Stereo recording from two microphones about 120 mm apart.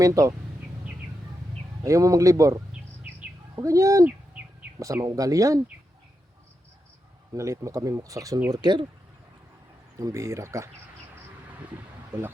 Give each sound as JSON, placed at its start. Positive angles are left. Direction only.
{"t": 0.0, "sound": "speech", "side_deg": -30}
{"t": 1.8, "sound": "speech", "side_deg": -25}
{"t": 7.3, "sound": "speech", "side_deg": -25}
{"t": 10.0, "sound": "speech", "side_deg": -25}
{"t": 12.1, "sound": "speech", "side_deg": -20}